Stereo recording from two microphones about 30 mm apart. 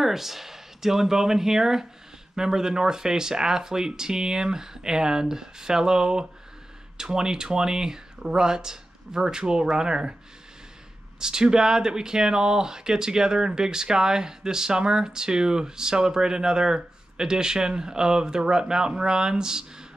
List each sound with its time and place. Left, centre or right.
0.0 s speech: centre; by 10.1 s right
11.1 s speech: right